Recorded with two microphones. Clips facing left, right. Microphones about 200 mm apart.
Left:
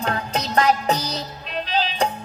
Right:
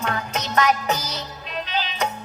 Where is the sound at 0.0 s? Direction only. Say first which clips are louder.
Left 2 dB; 35° left (ahead or behind).